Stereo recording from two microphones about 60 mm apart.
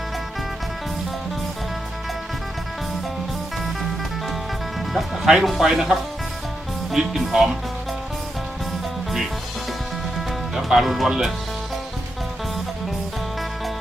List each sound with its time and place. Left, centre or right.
4.9 s speech: centre
10.2 s speech: centre